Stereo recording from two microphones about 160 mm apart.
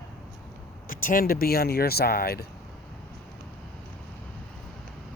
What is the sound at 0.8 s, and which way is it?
Speech, 60° left (ahead or behind).